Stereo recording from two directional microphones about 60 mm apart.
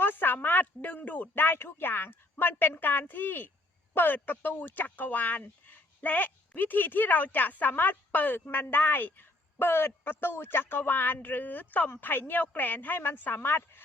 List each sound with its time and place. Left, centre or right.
0.0 s speech: left